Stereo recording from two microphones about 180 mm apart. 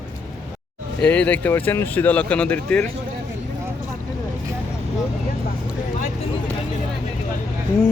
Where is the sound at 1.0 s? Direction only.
10° left (ahead or behind).